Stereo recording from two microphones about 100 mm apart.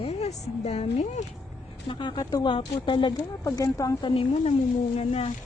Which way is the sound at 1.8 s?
55° left (ahead or behind).